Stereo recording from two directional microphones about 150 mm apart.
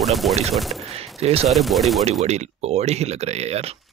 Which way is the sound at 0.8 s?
40° right (ahead or behind).